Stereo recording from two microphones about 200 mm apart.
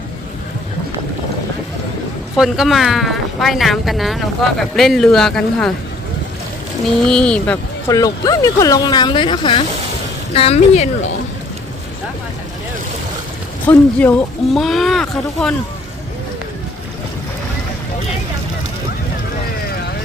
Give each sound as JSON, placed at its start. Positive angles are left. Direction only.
{"t": 2.3, "sound": "speech", "side_deg": 0}
{"t": 7.0, "sound": "speech", "side_deg": 5}
{"t": 7.9, "sound": "speech", "side_deg": 15}
{"t": 13.7, "sound": "speech", "side_deg": 5}